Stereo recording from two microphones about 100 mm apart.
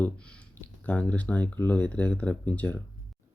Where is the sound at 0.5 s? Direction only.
15° left (ahead or behind).